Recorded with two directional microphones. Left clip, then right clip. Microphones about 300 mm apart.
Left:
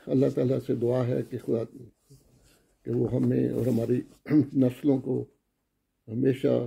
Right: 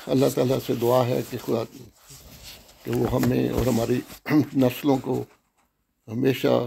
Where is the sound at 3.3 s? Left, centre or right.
Centre.